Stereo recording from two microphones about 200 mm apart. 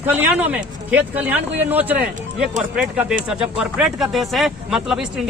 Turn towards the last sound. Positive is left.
turn(degrees=-5)  # may be behind; listen again after turning